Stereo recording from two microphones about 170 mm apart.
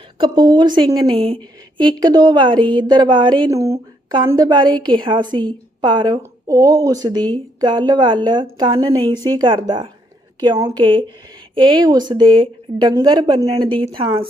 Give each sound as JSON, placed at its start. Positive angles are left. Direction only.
{"t": 0.2, "sound": "speech", "side_deg": -30}